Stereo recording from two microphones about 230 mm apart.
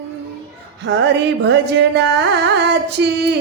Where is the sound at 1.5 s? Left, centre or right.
Right.